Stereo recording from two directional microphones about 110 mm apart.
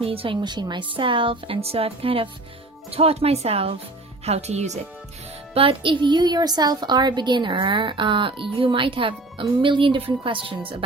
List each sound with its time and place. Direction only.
0.0 s a woman's voice: 60° right (ahead or behind)
0.4 s a woman's voice: 45° right (ahead or behind); by 3.8 s 65° right (ahead or behind)
4.3 s speech: 80° right
5.5 s a woman's voice: 55° right (ahead or behind)